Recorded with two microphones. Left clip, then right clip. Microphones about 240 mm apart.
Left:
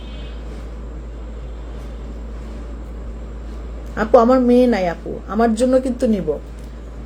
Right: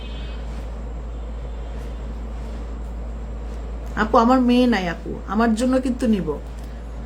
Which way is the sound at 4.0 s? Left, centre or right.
Centre.